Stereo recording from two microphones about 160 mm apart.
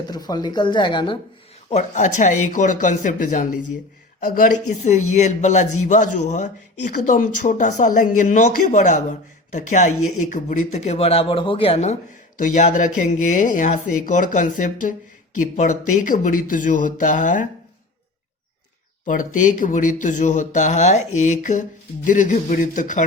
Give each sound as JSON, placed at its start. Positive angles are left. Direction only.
{"t": 0.1, "sound": "speech", "side_deg": 25}
{"t": 1.7, "sound": "speech", "side_deg": 50}
{"t": 12.4, "sound": "speech", "side_deg": 50}
{"t": 19.0, "sound": "speech", "side_deg": 55}